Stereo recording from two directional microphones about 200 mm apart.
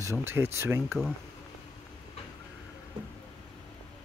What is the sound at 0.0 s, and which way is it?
Speech, 15° right (ahead or behind).